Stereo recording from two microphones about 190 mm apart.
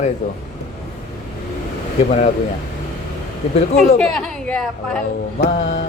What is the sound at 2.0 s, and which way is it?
Speech, 40° left (ahead or behind).